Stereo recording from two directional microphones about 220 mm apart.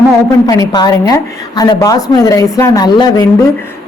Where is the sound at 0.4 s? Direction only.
15° left (ahead or behind).